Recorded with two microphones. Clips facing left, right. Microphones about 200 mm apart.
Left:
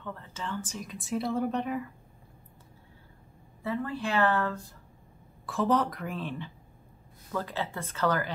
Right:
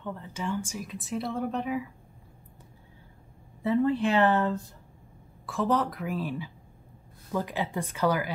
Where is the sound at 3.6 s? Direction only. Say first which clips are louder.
Right 8 dB; 20° right (ahead or behind).